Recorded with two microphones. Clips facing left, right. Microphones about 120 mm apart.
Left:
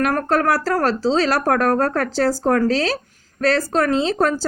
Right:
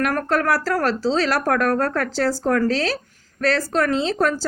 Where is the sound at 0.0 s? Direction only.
30° left (ahead or behind).